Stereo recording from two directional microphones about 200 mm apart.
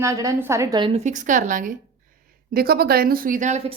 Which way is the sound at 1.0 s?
40° right (ahead or behind).